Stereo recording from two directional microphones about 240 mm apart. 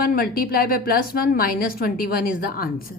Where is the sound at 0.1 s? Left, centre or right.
Left.